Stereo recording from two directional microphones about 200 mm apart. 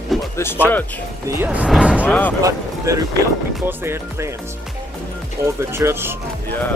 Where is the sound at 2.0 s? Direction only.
10° left (ahead or behind).